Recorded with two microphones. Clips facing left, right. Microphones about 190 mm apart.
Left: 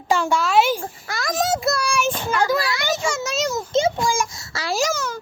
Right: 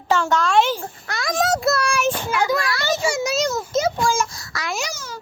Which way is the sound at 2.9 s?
10° right (ahead or behind).